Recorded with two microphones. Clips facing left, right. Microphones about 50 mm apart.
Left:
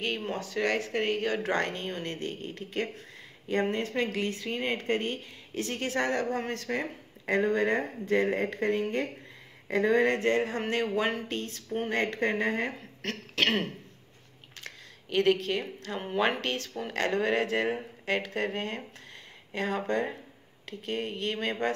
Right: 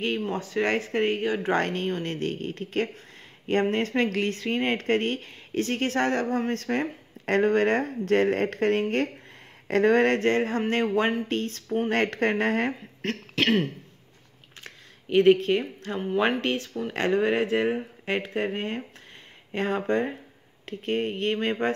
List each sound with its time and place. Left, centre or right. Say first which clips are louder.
0.3 s speech: right 2 dB; right
1.2 s speech: right 3 dB; centre
1.5 s speech: right 5 dB; right
2.1 s speech: right 6 dB; right
7.2 s speech: right 4 dB; right
11.9 s speech: right 3 dB; right
12.6 s speech: right 5 dB; right
14.6 s a sound: even; right
16.3 s speech: right 5 dB; right